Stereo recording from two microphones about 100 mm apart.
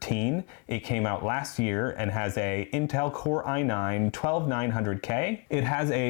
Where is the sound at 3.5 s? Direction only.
25° left (ahead or behind).